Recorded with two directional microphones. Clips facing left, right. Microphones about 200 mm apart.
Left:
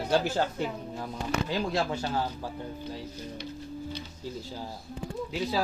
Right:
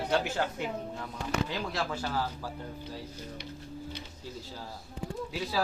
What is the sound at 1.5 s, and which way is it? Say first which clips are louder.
Speech: left 5 dB; 25° left (ahead or behind).